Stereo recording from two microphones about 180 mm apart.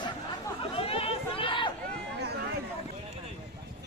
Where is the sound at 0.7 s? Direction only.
30° left (ahead or behind).